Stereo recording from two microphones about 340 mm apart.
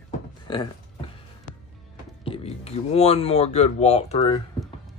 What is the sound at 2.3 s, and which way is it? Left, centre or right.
Speech, centre.